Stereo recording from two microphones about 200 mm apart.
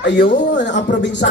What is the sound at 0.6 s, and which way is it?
Speech, 60° left (ahead or behind).